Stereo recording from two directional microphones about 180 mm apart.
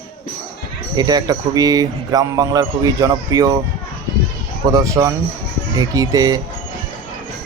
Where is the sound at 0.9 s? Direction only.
20° right (ahead or behind).